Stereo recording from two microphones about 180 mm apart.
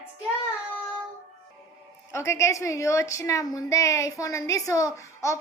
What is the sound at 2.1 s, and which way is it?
Speech, 15° left (ahead or behind).